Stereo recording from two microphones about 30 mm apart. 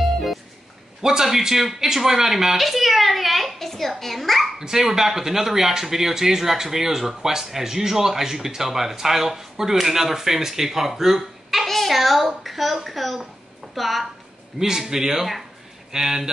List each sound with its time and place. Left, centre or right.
1.0 s speech: centre
3.5 s a woman's voice: centre
4.6 s speech: centre
11.6 s a sound: centre
11.9 s a woman's voice: centre
14.6 s speech: centre